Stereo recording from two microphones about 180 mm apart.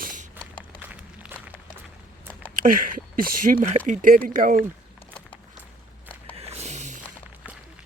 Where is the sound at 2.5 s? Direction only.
50° right (ahead or behind).